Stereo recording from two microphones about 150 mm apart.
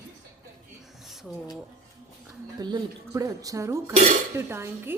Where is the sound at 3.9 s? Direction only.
45° right (ahead or behind).